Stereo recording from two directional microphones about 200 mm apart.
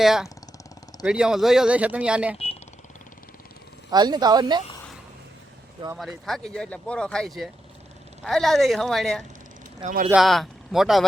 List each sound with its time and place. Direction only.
0.0 s speech: centre (ahead or behind)
3.9 s speech: 20° right (ahead or behind)
6.0 s speech: centre (ahead or behind)
9.8 s speech: 40° right (ahead or behind)
10.1 s speech: centre (ahead or behind)